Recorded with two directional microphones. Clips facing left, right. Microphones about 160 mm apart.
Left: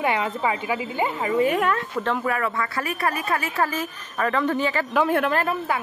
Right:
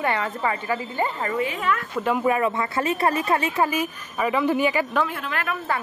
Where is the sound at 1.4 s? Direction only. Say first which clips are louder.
Left 11 dB; 55° left (ahead or behind).